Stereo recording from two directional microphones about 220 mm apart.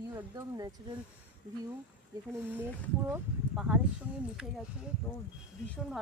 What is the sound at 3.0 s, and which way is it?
Speech, 5° right (ahead or behind).